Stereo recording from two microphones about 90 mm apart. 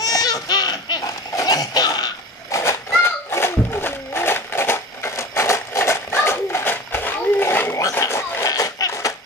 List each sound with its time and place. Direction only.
0.0 s baby laughter: 45° left (ahead or behind)
1.3 s cough: 45° left (ahead or behind)
2.5 s a sound: 30° left (ahead or behind)